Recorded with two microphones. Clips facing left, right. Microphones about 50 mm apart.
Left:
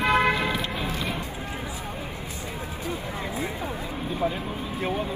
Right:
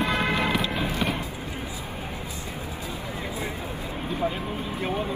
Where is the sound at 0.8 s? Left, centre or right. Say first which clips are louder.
Right 3 dB; right.